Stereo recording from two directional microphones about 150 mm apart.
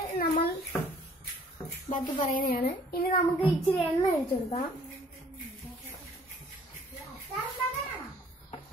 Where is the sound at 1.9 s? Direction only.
65° left (ahead or behind).